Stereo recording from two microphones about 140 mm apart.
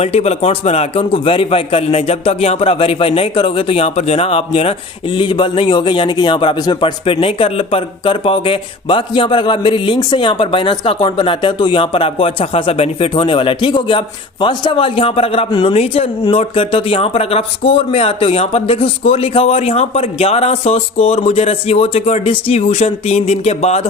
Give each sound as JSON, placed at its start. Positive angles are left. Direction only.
{"t": 0.0, "sound": "a man's voice", "side_deg": 50}